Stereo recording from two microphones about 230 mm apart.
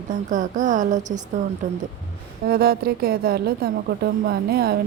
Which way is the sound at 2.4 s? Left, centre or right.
Right.